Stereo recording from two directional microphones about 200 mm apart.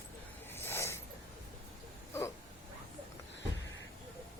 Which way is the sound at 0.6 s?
10° left (ahead or behind).